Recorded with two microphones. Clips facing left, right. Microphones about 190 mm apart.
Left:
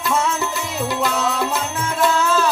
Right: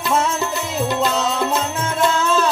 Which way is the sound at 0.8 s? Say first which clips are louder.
Right 1 dB; 20° right (ahead or behind).